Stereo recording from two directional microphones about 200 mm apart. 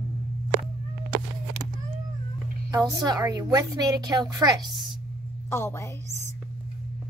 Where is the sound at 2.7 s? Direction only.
15° right (ahead or behind).